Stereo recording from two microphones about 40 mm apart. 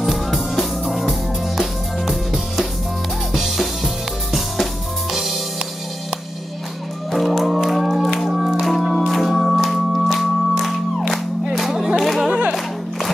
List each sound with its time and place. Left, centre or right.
0.0 s music: centre
7.1 s music: centre